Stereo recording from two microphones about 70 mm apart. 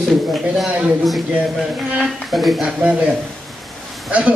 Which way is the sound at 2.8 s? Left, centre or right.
Centre.